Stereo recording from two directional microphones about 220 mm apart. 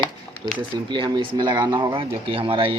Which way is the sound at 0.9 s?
20° right (ahead or behind).